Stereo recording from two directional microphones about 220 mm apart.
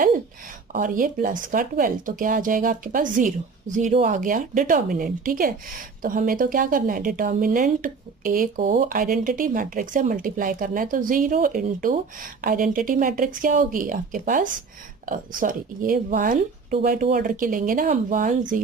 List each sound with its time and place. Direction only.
0.7 s speech: 40° right (ahead or behind)